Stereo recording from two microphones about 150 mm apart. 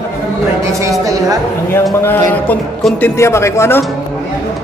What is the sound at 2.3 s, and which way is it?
Speech, 10° left (ahead or behind).